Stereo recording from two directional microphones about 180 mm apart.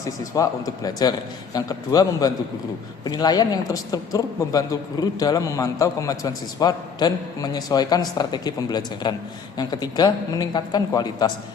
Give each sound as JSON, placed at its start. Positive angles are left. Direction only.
{"t": 0.0, "sound": "speech", "side_deg": 20}